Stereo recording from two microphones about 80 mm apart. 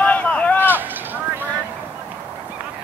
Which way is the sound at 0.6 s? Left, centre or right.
Right.